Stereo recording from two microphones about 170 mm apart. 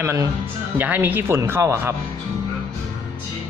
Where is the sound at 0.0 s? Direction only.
15° right (ahead or behind).